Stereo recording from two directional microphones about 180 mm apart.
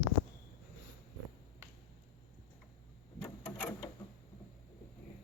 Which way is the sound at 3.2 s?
10° left (ahead or behind).